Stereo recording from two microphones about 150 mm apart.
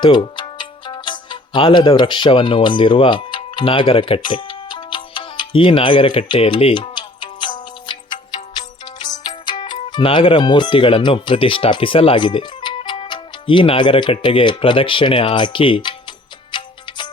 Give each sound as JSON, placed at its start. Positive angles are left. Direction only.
{"t": 0.0, "sound": "music", "side_deg": 30}
{"t": 8.8, "sound": "speech", "side_deg": 30}
{"t": 16.5, "sound": "music", "side_deg": 30}